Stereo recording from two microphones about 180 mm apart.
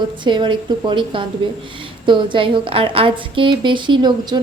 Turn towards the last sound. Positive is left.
turn(degrees=-25)  # may be behind; listen again after turning